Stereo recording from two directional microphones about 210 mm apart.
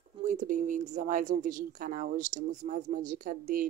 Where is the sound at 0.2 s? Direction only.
35° right (ahead or behind).